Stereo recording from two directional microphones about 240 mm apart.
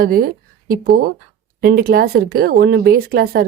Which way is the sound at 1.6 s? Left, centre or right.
Right.